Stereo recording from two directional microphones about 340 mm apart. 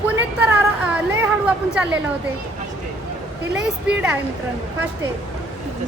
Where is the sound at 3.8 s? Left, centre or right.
Centre.